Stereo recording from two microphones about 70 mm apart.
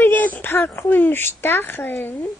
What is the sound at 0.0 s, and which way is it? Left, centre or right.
Speech, left.